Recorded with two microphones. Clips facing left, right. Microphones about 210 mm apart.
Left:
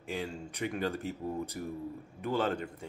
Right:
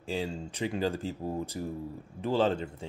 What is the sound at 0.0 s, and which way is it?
Speech, 30° right (ahead or behind).